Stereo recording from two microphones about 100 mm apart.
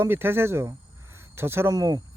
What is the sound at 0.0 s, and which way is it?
Speech, 25° right (ahead or behind).